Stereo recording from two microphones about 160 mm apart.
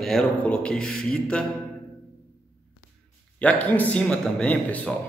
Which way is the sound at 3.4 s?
10° left (ahead or behind).